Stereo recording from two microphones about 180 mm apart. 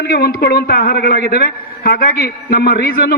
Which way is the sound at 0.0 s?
60° left (ahead or behind).